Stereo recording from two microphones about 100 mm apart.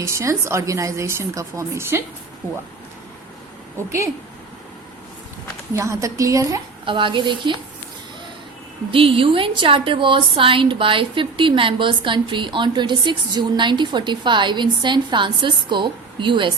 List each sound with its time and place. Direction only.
0.0 s a woman's voice: 30° right (ahead or behind)
5.7 s a woman's voice: 30° right (ahead or behind)
6.8 s a woman's voice: 55° right (ahead or behind)
8.9 s a woman's voice: 65° right (ahead or behind)